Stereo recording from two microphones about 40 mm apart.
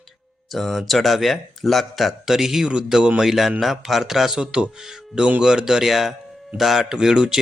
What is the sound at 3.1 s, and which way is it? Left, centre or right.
Speech, centre.